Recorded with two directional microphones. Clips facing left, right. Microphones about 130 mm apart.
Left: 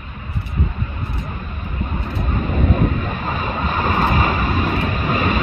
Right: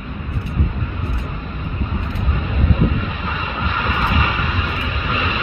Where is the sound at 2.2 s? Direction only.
45° left (ahead or behind).